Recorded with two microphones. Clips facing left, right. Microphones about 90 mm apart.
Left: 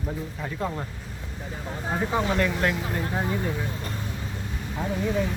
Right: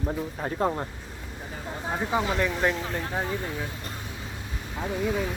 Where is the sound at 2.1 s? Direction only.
Centre (ahead or behind).